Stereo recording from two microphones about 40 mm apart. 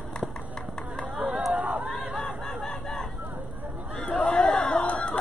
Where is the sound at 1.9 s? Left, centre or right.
Centre.